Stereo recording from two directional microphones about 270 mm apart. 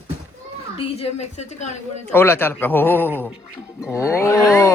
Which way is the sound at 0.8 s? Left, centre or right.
Left.